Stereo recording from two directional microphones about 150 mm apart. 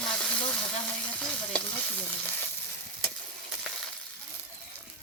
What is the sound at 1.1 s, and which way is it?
Stir, 10° left (ahead or behind).